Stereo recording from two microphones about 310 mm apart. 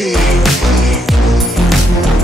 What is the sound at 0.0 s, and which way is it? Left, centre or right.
Music, centre.